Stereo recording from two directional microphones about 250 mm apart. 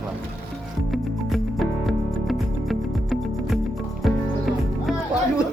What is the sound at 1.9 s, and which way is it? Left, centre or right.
Music, centre.